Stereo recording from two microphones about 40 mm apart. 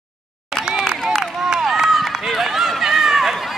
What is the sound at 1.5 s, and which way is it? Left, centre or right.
Run, centre.